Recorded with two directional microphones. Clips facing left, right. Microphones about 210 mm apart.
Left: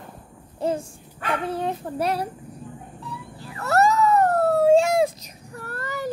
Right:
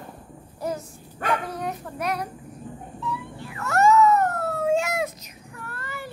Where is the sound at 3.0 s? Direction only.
35° left (ahead or behind).